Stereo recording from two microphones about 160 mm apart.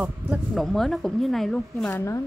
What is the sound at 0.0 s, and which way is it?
Speech, centre (ahead or behind).